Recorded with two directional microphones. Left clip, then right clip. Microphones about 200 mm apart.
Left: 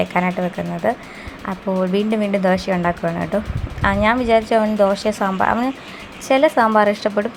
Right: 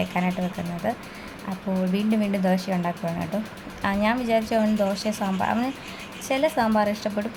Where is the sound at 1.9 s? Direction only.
10° left (ahead or behind).